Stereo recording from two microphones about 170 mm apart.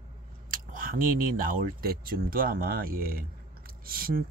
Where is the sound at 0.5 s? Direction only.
55° right (ahead or behind).